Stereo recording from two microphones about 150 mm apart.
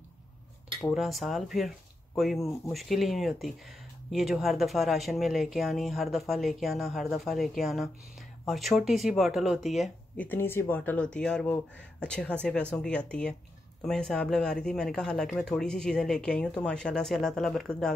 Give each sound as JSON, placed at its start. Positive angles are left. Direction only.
{"t": 0.9, "sound": "speech", "side_deg": 0}
{"t": 10.2, "sound": "speech", "side_deg": 15}